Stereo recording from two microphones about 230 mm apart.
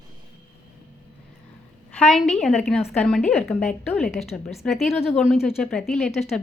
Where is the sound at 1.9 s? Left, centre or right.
Centre.